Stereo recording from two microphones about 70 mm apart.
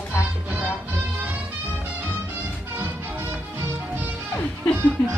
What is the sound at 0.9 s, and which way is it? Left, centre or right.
Music, right.